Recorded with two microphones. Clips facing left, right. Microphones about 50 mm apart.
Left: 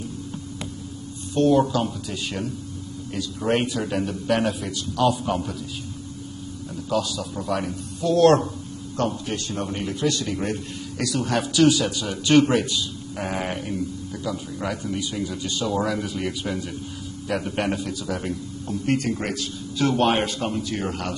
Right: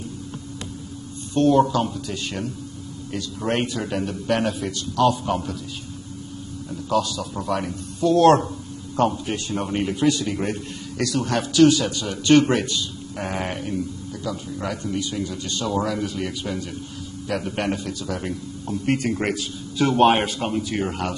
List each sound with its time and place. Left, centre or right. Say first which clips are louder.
1.3 s a man's voice: right 1 dB; centre
6.7 s a man's voice: right 2 dB; centre
9.1 s a man's voice: right 2 dB; centre